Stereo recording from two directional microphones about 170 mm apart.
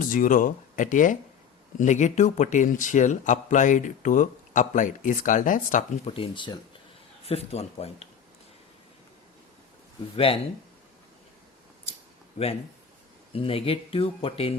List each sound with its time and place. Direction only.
0.1 s a man's voice: 50° left (ahead or behind)
6.1 s speech: 30° left (ahead or behind)
10.2 s speech: 35° left (ahead or behind)
13.3 s speech: 35° left (ahead or behind)